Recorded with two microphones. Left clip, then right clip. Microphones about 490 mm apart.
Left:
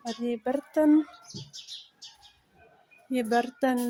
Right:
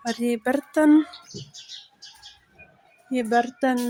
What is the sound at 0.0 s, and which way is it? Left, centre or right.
Speech, left.